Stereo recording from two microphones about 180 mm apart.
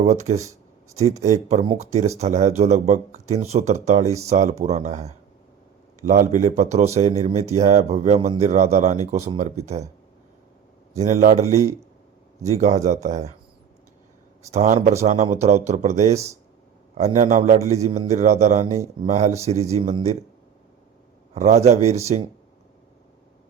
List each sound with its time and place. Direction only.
0.0 s speech: 40° right (ahead or behind)
10.9 s speech: 40° right (ahead or behind)
12.5 s speech: 40° right (ahead or behind)
14.5 s speech: 40° right (ahead or behind)
21.3 s speech: 40° right (ahead or behind)